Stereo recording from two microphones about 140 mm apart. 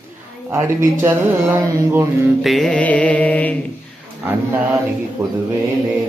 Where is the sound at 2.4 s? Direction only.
Centre (ahead or behind).